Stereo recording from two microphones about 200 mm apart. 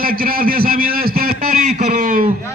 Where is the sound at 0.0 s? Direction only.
45° right (ahead or behind).